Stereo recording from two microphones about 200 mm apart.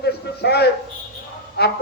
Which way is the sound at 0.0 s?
55° left (ahead or behind).